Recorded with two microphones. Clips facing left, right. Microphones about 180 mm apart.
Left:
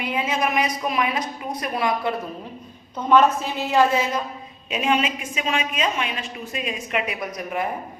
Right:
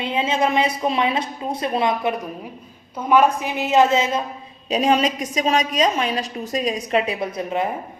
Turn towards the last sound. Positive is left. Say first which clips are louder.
# right 4 dB
turn(degrees=-25)  # may be behind; listen again after turning